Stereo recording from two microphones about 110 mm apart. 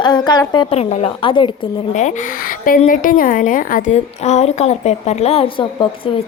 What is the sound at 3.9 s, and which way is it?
A woman's voice, 90° left.